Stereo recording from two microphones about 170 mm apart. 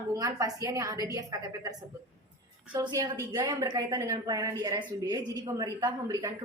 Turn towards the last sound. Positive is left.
turn(degrees=-20)  # may be behind; listen again after turning